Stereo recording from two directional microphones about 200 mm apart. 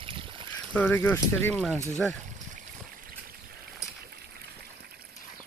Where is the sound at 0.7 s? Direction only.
10° left (ahead or behind).